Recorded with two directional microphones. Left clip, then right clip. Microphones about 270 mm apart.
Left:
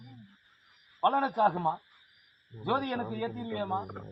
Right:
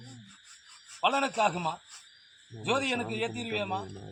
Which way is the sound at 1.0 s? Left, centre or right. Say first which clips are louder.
Even; centre.